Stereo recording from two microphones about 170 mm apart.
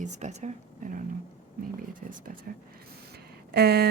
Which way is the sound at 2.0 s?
55° right (ahead or behind).